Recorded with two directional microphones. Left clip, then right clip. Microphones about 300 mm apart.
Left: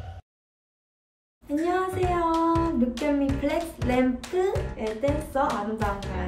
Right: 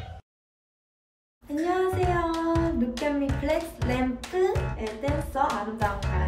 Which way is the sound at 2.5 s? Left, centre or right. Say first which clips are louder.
Left 2 dB; centre.